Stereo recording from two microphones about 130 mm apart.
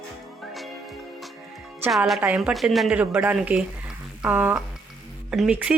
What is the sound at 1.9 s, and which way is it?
A woman's voice, centre (ahead or behind).